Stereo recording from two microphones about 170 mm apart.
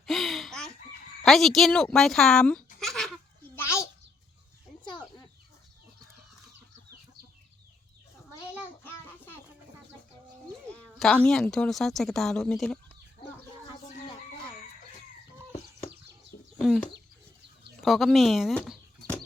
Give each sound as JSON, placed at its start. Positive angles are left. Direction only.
{"t": 0.0, "sound": "fowl", "side_deg": 0}
{"t": 1.2, "sound": "speech", "side_deg": 0}
{"t": 2.8, "sound": "laughter", "side_deg": 0}
{"t": 3.5, "sound": "a sound", "side_deg": 15}
{"t": 4.9, "sound": "chicken", "side_deg": 25}
{"t": 8.8, "sound": "child singing", "side_deg": 10}
{"t": 10.7, "sound": "speech", "side_deg": 5}
{"t": 15.9, "sound": "a sound", "side_deg": -85}
{"t": 16.6, "sound": "speech", "side_deg": 0}